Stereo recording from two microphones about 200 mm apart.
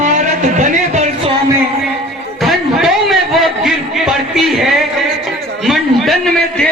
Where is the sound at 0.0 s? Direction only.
35° right (ahead or behind).